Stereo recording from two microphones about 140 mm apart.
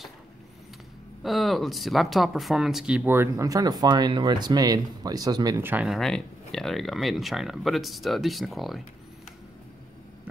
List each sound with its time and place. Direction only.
1.2 s speech: centre (ahead or behind); by 5.6 s 25° right (ahead or behind)
5.6 s speech: 15° right (ahead or behind)
5.9 s speech: 5° left (ahead or behind)